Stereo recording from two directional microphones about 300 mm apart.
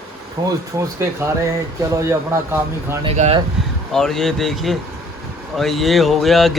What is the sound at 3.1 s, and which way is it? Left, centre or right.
Speech, right.